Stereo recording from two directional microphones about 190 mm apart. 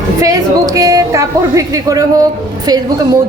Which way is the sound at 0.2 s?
20° right (ahead or behind).